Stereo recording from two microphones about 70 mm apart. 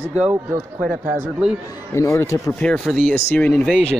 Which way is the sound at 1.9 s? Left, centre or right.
Left.